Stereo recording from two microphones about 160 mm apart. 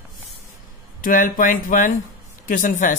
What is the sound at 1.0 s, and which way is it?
Speech, 60° left (ahead or behind).